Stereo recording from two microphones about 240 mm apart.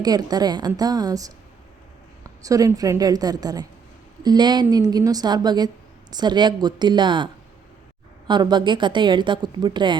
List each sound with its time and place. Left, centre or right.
0.0 s a woman's voice: centre
8.3 s a woman's voice: centre